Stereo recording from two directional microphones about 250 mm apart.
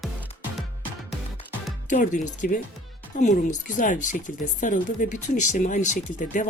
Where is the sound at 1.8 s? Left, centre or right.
Left.